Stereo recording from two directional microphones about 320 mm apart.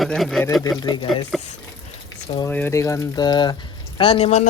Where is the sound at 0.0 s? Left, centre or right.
Centre.